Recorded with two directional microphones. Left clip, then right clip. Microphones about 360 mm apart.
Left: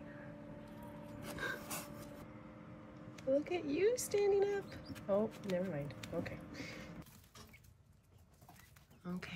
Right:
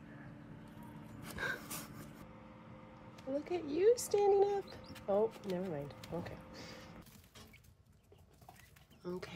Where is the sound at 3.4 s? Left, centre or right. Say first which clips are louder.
Right 2 dB; centre.